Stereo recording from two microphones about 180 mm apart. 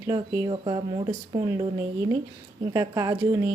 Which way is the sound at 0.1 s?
25° right (ahead or behind).